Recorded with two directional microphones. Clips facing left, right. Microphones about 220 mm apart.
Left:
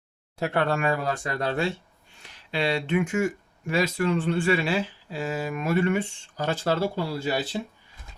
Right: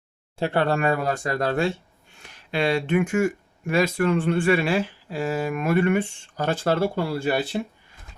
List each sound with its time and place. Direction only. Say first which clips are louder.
0.3 s speech: right 3 dB; 30° right (ahead or behind)
0.9 s speech: right 3 dB; 50° right (ahead or behind)